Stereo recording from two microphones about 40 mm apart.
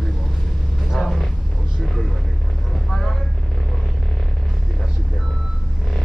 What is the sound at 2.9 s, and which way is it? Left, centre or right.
Vehicle, centre.